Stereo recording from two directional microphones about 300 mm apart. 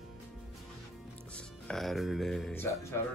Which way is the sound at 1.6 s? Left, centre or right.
Centre.